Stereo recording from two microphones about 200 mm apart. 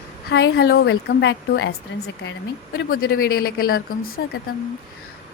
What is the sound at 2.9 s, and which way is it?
Speech, 45° left (ahead or behind).